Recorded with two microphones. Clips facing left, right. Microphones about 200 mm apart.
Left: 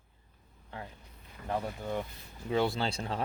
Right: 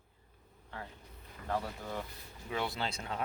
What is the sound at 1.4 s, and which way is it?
Speech, 20° left (ahead or behind).